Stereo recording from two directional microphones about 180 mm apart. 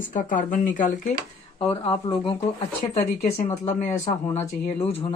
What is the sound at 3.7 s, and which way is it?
Speech, 40° left (ahead or behind).